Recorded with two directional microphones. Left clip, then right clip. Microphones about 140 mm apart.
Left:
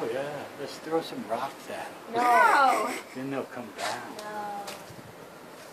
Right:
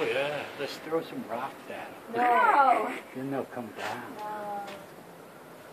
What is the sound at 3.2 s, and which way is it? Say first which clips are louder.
Speech: even; 35° right (ahead or behind).